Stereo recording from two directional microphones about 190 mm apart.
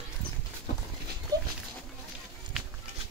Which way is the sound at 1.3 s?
20° right (ahead or behind).